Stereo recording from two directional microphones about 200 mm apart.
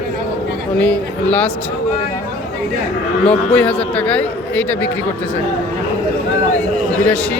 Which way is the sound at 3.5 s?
5° left (ahead or behind).